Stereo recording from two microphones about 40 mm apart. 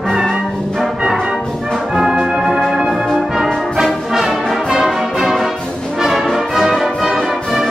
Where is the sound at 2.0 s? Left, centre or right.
Centre.